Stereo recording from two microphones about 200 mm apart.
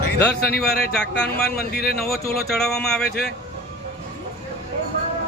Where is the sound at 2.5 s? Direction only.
5° left (ahead or behind).